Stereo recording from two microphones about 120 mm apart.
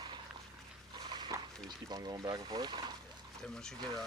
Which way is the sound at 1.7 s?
35° right (ahead or behind).